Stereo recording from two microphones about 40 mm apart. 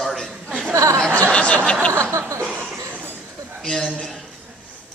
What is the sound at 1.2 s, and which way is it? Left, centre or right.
Speech, left.